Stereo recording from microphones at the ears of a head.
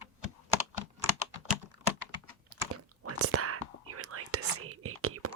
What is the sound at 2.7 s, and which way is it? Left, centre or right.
Whispering, right.